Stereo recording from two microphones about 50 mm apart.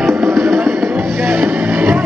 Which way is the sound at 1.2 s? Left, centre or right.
Right.